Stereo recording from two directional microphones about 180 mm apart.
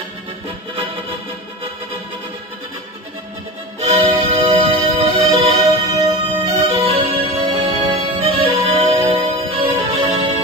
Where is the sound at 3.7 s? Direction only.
30° right (ahead or behind).